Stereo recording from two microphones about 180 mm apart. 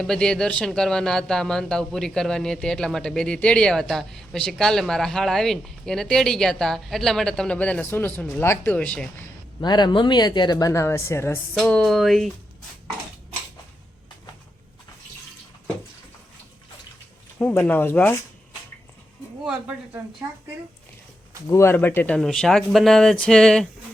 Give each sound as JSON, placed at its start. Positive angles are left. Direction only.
{"t": 0.0, "sound": "speech", "side_deg": 5}
{"t": 9.6, "sound": "speech", "side_deg": 25}
{"t": 11.5, "sound": "speech", "side_deg": 5}
{"t": 17.4, "sound": "speech", "side_deg": 10}
{"t": 19.5, "sound": "a woman's voice", "side_deg": -5}
{"t": 21.4, "sound": "speech", "side_deg": 15}